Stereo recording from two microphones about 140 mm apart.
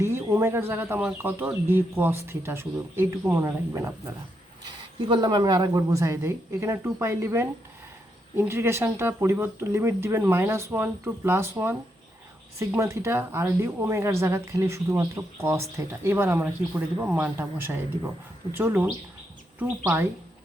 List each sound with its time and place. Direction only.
0.0 s speech: 20° right (ahead or behind)
4.6 s speech: 35° right (ahead or behind); by 20.1 s 15° right (ahead or behind)